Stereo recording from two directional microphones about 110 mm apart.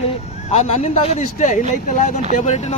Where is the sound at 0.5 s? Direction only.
85° left.